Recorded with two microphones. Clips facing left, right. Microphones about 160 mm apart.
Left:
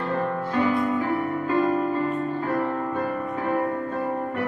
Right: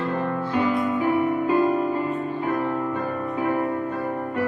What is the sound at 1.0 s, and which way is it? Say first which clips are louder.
Music: right 4 dB; 15° right (ahead or behind).